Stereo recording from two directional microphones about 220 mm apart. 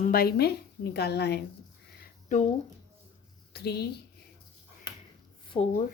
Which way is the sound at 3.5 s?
45° left (ahead or behind).